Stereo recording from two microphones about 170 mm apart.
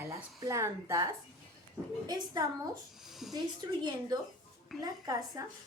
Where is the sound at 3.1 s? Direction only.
Centre (ahead or behind).